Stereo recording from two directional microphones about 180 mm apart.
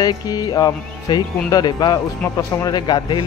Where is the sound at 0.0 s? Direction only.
20° left (ahead or behind).